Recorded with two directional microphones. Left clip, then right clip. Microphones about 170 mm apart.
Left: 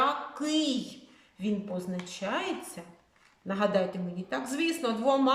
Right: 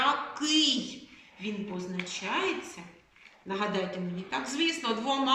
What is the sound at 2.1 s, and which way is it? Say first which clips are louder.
A woman's voice: right 2 dB; 50° left (ahead or behind).